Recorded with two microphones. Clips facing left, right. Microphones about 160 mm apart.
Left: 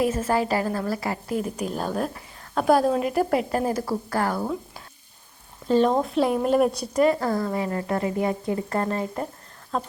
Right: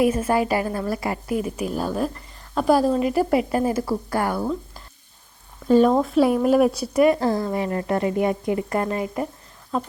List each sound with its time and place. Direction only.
0.0 s a woman's voice: 10° right (ahead or behind)
1.3 s a woman's voice: 5° right (ahead or behind)
4.4 s speech: 5° left (ahead or behind)
5.6 s a woman's voice: 10° right (ahead or behind)
7.2 s a woman's voice: 25° right (ahead or behind); by 9.9 s 5° right (ahead or behind)